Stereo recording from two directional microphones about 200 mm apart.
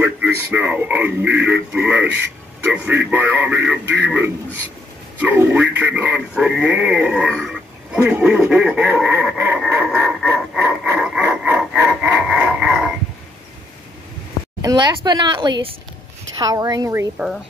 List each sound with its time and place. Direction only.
0.0 s speech: 10° right (ahead or behind)
14.6 s speech: 15° right (ahead or behind)